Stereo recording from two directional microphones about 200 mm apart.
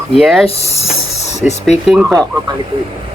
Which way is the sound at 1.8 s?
Centre (ahead or behind).